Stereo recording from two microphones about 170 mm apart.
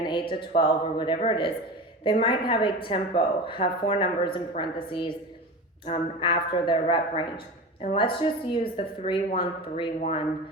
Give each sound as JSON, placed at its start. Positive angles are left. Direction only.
{"t": 0.0, "sound": "a man's voice", "side_deg": 30}